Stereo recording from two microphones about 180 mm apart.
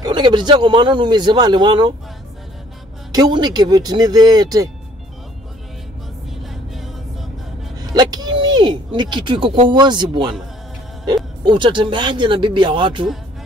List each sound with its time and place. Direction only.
0.0 s speech: 25° right (ahead or behind)
3.1 s speech: 25° right (ahead or behind)
6.5 s vehicle: centre (ahead or behind)
7.9 s a sound: 20° right (ahead or behind)
9.7 s speech: 25° right (ahead or behind)
11.4 s speech: 25° right (ahead or behind)